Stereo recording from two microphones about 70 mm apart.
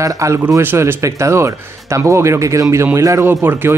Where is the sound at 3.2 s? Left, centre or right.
Right.